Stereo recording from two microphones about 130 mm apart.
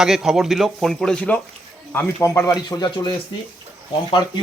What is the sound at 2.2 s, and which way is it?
Speech, 20° left (ahead or behind).